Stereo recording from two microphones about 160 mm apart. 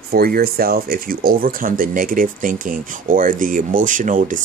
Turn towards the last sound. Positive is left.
turn(degrees=-55)  # may be behind; listen again after turning